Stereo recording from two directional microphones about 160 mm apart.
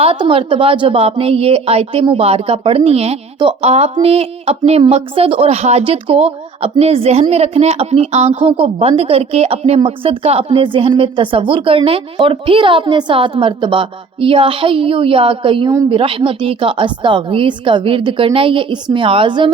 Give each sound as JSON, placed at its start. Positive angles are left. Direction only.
{"t": 0.0, "sound": "speech", "side_deg": -35}